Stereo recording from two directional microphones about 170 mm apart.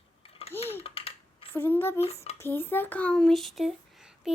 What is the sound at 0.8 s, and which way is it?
Typing, 35° left (ahead or behind).